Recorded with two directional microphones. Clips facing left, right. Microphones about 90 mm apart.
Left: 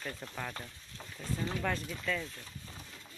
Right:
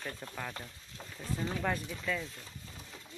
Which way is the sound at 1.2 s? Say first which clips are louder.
Even; 10° right (ahead or behind).